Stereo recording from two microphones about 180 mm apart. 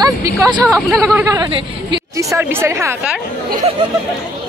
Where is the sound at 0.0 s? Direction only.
20° right (ahead or behind).